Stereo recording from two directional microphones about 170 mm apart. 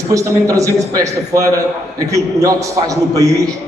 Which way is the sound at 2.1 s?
20° right (ahead or behind).